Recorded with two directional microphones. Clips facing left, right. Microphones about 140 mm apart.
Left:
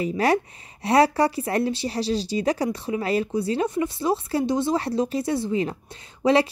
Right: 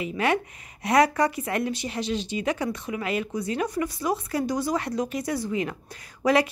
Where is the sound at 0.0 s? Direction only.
35° left (ahead or behind).